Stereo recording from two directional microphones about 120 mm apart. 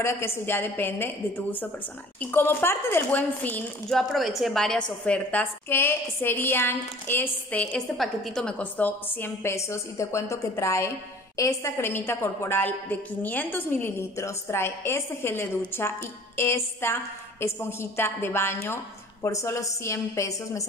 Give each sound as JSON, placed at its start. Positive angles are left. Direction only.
{"t": 0.0, "sound": "a woman's voice", "side_deg": 20}
{"t": 3.9, "sound": "a woman's voice", "side_deg": 0}
{"t": 8.0, "sound": "a woman's voice", "side_deg": 5}